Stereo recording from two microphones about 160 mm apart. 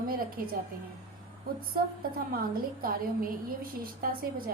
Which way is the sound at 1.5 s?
65° right (ahead or behind).